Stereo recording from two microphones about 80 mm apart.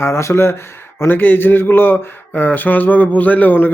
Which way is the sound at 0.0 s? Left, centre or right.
Left.